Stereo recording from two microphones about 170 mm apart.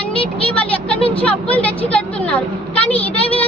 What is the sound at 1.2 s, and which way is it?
A woman's voice, 10° left (ahead or behind).